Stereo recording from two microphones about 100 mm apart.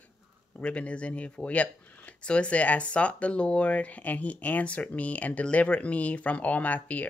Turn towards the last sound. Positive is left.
turn(degrees=15)  # may be behind; listen again after turning